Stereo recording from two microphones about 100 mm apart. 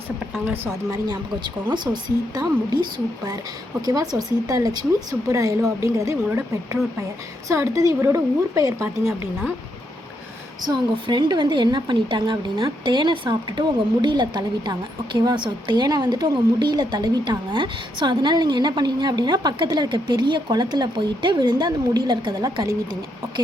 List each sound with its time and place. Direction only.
0.4 s a woman's voice: 20° right (ahead or behind)
0.9 s a woman's voice: 40° right (ahead or behind)
3.8 s a woman's voice: 40° right (ahead or behind)
7.4 s a woman's voice: 30° right (ahead or behind)
11.0 s a woman's voice: 50° right (ahead or behind)